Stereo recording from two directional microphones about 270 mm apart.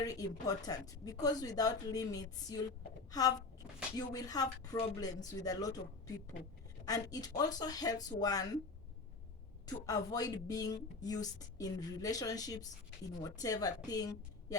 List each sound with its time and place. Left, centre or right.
0.0 s speech: centre
6.8 s speech: centre
9.6 s speech: centre